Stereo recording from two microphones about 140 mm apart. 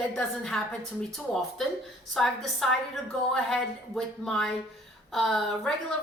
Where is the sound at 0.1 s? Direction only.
5° left (ahead or behind).